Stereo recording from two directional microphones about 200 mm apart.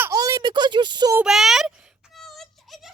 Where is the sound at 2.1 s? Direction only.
Centre (ahead or behind).